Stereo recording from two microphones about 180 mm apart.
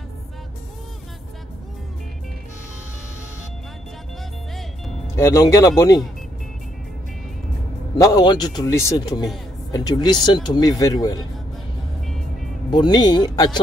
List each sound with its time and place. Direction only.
4.6 s music: centre (ahead or behind)
5.1 s speech: 15° left (ahead or behind)
8.0 s speech: 20° left (ahead or behind)
12.7 s speech: 25° left (ahead or behind)